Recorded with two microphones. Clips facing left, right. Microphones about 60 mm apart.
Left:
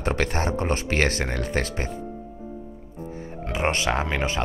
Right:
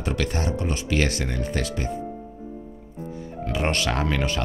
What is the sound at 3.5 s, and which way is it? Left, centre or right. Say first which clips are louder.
Speech: left 1 dB; left.